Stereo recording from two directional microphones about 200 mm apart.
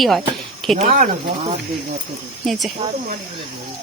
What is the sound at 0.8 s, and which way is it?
Speech, 40° right (ahead or behind).